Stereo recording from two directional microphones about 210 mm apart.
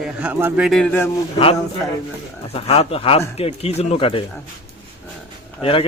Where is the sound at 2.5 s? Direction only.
30° left (ahead or behind).